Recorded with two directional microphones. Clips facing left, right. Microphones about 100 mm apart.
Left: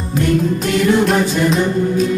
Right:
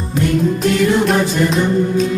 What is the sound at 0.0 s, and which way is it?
Music, centre (ahead or behind).